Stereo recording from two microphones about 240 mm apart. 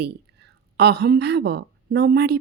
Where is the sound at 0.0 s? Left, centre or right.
Right.